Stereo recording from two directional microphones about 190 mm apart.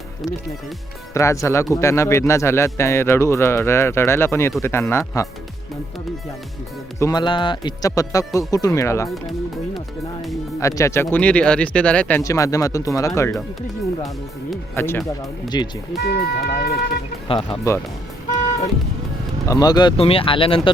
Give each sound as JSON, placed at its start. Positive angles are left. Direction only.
{"t": 1.1, "sound": "speech", "side_deg": 15}
{"t": 7.0, "sound": "speech", "side_deg": 20}
{"t": 10.6, "sound": "speech", "side_deg": 15}
{"t": 14.8, "sound": "speech", "side_deg": 15}
{"t": 16.0, "sound": "speech", "side_deg": 55}
{"t": 17.2, "sound": "speech", "side_deg": 25}
{"t": 19.5, "sound": "speech", "side_deg": 20}